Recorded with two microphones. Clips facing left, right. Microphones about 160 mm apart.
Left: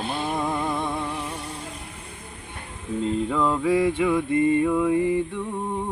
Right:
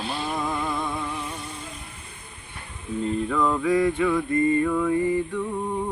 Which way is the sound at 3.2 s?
20° left (ahead or behind).